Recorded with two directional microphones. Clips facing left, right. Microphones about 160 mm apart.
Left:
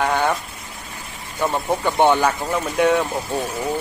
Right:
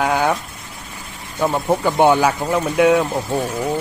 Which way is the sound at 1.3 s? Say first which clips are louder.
Right 3 dB; 10° right (ahead or behind).